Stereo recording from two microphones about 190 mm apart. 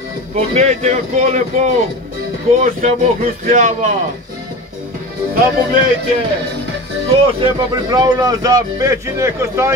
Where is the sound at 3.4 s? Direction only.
40° right (ahead or behind).